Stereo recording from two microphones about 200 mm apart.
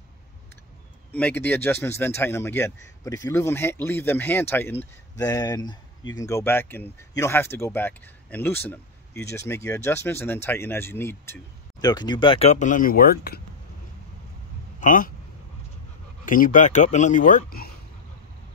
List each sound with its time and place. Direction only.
1.1 s speech: 10° left (ahead or behind); by 13.4 s 50° left (ahead or behind)
14.8 s a man's voice: 45° left (ahead or behind)
16.3 s speech: 45° left (ahead or behind)